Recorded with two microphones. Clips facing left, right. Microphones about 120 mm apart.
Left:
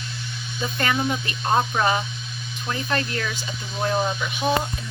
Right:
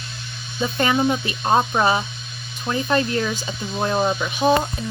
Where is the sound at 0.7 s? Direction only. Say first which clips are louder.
Right 5 dB; 20° right (ahead or behind).